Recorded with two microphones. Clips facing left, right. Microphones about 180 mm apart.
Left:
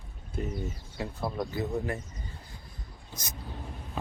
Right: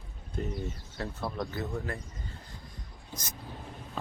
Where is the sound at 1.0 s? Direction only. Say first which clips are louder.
Left 2 dB; 15° left (ahead or behind).